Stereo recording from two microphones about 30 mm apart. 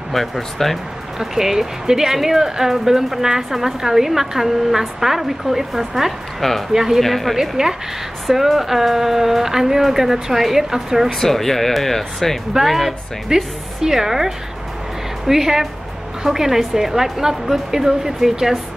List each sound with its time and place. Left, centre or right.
0.1 s speech: centre
1.2 s a woman's voice: centre
7.0 s speech: centre
7.3 s a woman's voice: centre
8.3 s a woman's voice: centre
11.1 s speech: centre
12.6 s speech: centre
13.3 s a woman's voice: right